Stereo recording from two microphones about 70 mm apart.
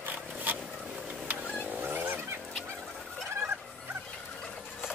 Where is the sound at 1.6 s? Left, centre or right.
Right.